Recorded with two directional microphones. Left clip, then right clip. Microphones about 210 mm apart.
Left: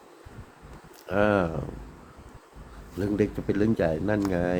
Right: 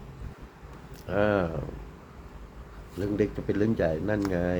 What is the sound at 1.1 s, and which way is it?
Speech, 10° left (ahead or behind).